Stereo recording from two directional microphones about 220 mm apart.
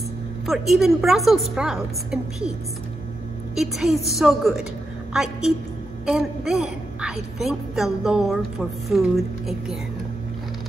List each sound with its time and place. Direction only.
0.5 s a woman's voice: centre (ahead or behind)
3.5 s a woman's voice: centre (ahead or behind)